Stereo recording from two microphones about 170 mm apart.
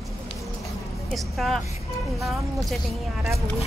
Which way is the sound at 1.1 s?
Centre (ahead or behind).